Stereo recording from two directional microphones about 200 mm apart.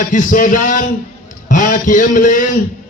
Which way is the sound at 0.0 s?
40° left (ahead or behind).